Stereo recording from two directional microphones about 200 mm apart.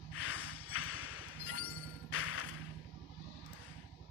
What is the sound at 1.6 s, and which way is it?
Music, 10° left (ahead or behind).